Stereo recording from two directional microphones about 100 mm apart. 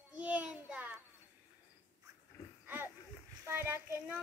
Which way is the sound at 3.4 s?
25° right (ahead or behind).